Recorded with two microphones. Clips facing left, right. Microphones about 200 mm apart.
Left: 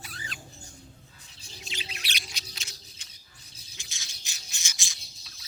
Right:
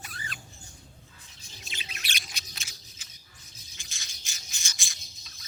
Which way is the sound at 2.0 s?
50° right (ahead or behind).